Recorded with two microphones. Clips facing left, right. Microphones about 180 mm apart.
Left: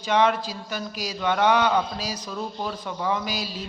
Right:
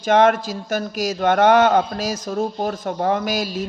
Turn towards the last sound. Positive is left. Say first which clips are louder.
# right 7 dB
turn(degrees=-50)  # may be behind; listen again after turning